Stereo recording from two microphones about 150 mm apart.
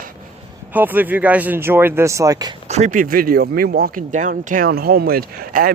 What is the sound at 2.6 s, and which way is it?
Speech, 50° right (ahead or behind).